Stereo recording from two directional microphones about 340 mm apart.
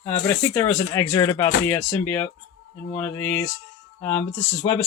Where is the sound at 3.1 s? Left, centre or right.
Left.